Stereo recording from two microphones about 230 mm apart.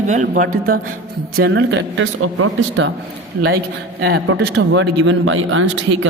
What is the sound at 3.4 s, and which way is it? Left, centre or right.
A man's voice, right.